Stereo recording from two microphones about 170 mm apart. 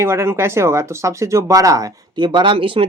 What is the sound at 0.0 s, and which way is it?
Speech, 15° right (ahead or behind).